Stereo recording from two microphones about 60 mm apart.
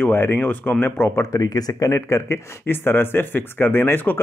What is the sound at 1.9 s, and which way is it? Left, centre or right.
Speech, left.